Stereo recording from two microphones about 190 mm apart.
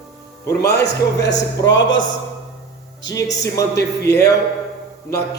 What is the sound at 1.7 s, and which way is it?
Speech, 75° left (ahead or behind).